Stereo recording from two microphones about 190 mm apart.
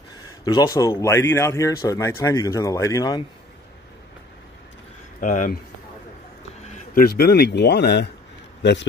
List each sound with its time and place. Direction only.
0.5 s speech: 20° left (ahead or behind)
5.2 s speech: 45° left (ahead or behind)
6.7 s speech: 50° left (ahead or behind)